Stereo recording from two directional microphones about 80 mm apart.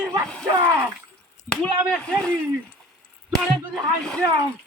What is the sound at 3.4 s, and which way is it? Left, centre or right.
Speech, centre.